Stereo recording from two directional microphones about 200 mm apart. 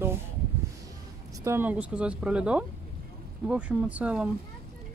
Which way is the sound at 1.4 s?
10° right (ahead or behind).